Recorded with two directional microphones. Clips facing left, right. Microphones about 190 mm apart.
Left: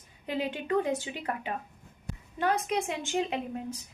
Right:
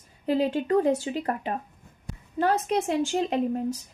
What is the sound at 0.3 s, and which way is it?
A woman's voice, 40° right (ahead or behind).